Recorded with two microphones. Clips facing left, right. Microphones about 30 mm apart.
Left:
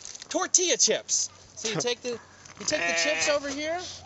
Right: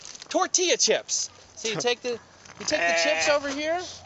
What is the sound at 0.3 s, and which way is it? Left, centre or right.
Speech, centre.